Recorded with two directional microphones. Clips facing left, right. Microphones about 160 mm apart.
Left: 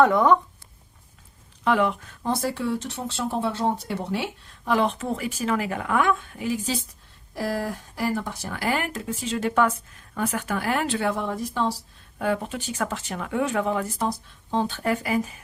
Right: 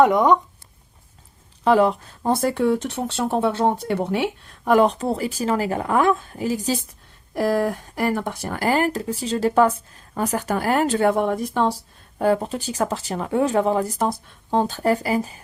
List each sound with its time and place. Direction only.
0.0 s speech: 15° right (ahead or behind)
1.6 s speech: 35° right (ahead or behind)
2.3 s speech: 55° right (ahead or behind); by 6.7 s 40° right (ahead or behind)
7.3 s speech: 60° right (ahead or behind)
12.2 s speech: 35° right (ahead or behind)
14.1 s speech: 50° right (ahead or behind); by 15.4 s 35° right (ahead or behind)